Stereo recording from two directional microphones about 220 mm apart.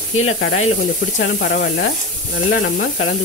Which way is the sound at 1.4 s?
45° left (ahead or behind).